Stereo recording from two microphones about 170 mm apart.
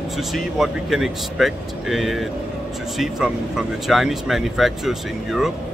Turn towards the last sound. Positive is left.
turn(degrees=0)  # may be behind; listen again after turning